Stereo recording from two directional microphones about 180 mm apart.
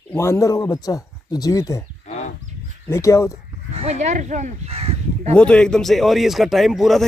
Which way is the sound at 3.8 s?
40° right (ahead or behind).